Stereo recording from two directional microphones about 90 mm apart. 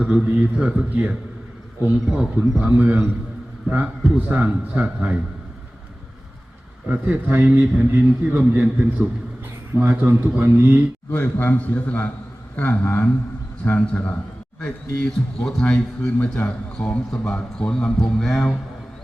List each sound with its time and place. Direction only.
0.0 s a man's voice: 15° right (ahead or behind)
2.1 s a man's voice: 15° right (ahead or behind)
6.8 s a man's voice: 15° right (ahead or behind)
11.1 s a man's voice: 25° left (ahead or behind); by 18.5 s 5° left (ahead or behind)